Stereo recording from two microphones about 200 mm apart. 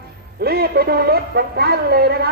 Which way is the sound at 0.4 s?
50° right (ahead or behind).